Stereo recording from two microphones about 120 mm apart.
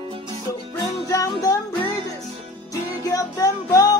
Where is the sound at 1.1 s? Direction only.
30° left (ahead or behind).